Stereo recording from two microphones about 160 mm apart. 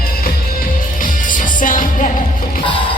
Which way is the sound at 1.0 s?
55° left (ahead or behind).